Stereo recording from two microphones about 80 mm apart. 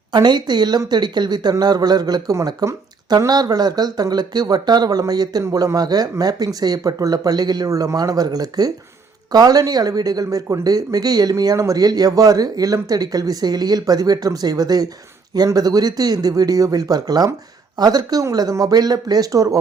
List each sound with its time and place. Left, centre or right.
0.1 s speech: right
5.4 s speech: right